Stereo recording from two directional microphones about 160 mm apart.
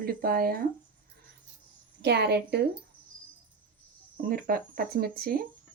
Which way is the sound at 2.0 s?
90° right.